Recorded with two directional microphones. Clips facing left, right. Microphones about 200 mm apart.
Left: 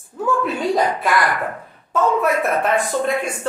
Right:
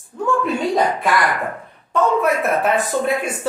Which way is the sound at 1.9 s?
Centre (ahead or behind).